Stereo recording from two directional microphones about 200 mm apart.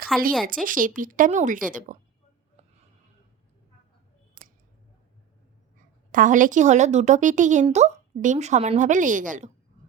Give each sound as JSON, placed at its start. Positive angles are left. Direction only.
{"t": 0.1, "sound": "speech", "side_deg": 0}
{"t": 0.4, "sound": "a woman's voice", "side_deg": -45}
{"t": 6.1, "sound": "a woman's voice", "side_deg": -40}